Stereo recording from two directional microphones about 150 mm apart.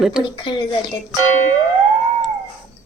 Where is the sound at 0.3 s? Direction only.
30° left (ahead or behind).